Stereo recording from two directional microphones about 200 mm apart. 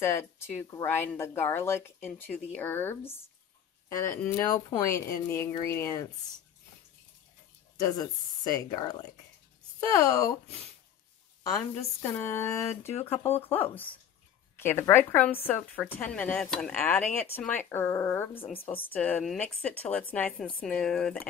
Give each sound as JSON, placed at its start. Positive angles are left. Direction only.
{"t": 0.0, "sound": "speech", "side_deg": 10}
{"t": 4.2, "sound": "speech", "side_deg": 15}
{"t": 8.6, "sound": "speech", "side_deg": 20}
{"t": 9.9, "sound": "speech", "side_deg": 15}
{"t": 12.0, "sound": "speech", "side_deg": 10}
{"t": 18.3, "sound": "speech", "side_deg": 25}
{"t": 18.9, "sound": "speech", "side_deg": 5}